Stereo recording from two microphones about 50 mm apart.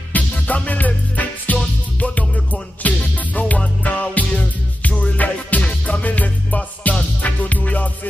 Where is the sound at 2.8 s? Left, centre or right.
Left.